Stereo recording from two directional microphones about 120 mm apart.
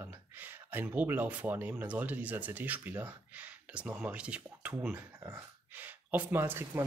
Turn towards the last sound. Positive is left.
turn(degrees=-20)  # may be behind; listen again after turning